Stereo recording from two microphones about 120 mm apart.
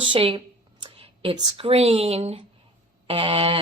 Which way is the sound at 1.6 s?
55° right (ahead or behind).